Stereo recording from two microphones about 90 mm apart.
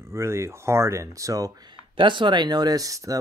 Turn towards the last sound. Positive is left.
turn(degrees=-40)  # may be behind; listen again after turning